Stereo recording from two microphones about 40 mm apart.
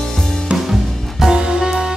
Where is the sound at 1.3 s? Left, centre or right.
Centre.